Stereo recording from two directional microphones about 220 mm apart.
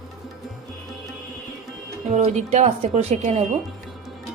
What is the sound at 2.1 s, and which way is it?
A woman's voice, 30° right (ahead or behind).